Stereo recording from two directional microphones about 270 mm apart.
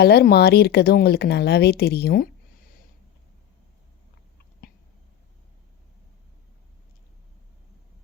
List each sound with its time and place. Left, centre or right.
0.0 s speech: left